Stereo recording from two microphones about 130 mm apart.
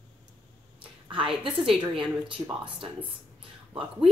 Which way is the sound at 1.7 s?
40° right (ahead or behind).